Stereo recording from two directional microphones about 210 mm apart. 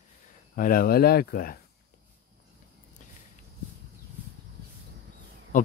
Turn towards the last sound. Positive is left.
turn(degrees=40)  # may be behind; listen again after turning